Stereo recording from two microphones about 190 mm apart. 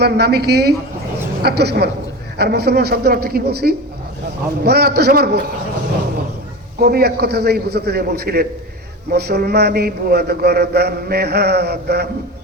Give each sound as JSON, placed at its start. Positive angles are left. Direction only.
{"t": 0.0, "sound": "a man's voice", "side_deg": -60}
{"t": 6.8, "sound": "a man's voice", "side_deg": -55}